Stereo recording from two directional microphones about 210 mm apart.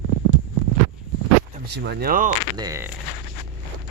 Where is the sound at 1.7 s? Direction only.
55° right (ahead or behind).